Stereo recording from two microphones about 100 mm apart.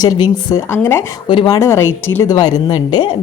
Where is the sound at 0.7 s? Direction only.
25° left (ahead or behind).